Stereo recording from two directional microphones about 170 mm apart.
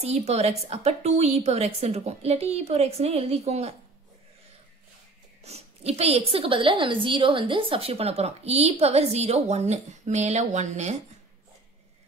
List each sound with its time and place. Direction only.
0.0 s speech: 40° right (ahead or behind)
5.4 s speech: 40° right (ahead or behind)